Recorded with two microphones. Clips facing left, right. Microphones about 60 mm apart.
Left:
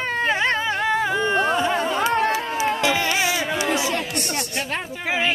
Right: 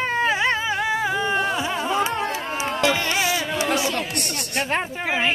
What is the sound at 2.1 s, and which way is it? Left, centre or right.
Music, left.